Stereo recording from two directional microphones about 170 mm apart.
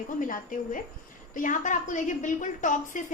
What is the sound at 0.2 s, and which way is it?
A woman's voice, 50° left (ahead or behind).